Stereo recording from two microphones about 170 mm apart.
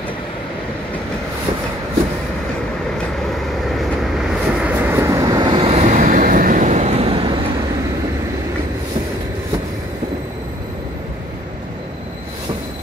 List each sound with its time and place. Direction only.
3.3 s vehicle: centre (ahead or behind); by 7.3 s 35° right (ahead or behind)